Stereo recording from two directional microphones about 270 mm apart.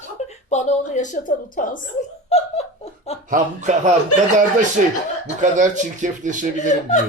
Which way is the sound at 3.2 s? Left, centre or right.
Right.